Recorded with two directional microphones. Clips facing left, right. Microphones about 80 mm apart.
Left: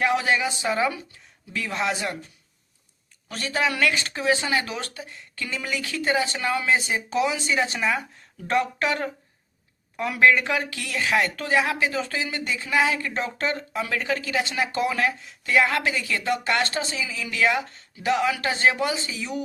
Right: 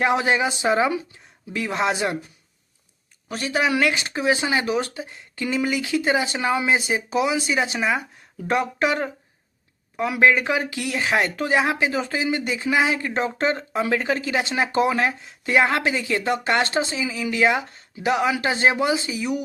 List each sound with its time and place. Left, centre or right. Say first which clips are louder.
0.0 s speech: right 2 dB; right
3.2 s speech: right 3 dB; centre